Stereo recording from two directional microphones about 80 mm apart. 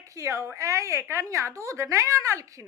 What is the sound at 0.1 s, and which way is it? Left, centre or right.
A woman's voice, right.